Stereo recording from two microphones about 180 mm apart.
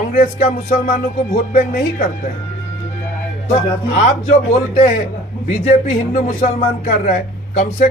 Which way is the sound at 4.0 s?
40° left (ahead or behind).